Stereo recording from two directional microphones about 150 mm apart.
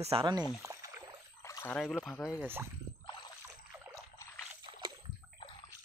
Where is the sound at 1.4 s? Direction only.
20° left (ahead or behind).